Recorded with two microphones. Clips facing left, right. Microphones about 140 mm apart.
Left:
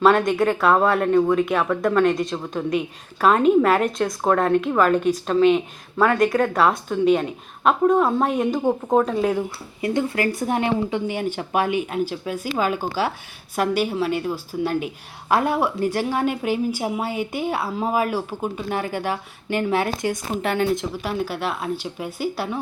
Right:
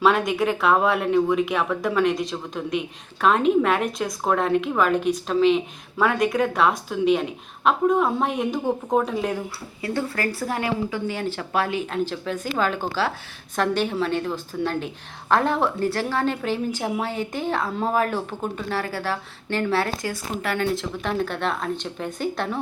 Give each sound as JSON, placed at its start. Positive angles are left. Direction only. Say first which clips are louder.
{"t": 0.0, "sound": "speech", "louder": "left 3 dB", "side_deg": 0}
{"t": 9.8, "sound": "a woman's voice", "louder": "left 4 dB", "side_deg": 20}
{"t": 18.8, "sound": "a woman's voice", "louder": "left 2 dB", "side_deg": 20}
{"t": 21.0, "sound": "a woman's voice", "louder": "even", "side_deg": 5}